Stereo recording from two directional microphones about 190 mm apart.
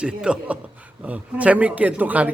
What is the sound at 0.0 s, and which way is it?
A man's voice, 5° right (ahead or behind).